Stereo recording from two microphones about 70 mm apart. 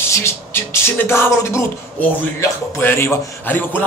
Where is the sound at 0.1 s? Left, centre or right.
Left.